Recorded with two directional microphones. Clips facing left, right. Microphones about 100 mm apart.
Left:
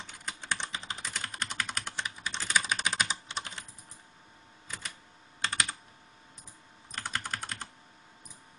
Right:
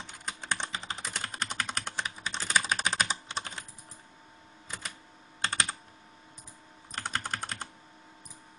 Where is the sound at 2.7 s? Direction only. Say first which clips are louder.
Right 2 dB; 35° right (ahead or behind).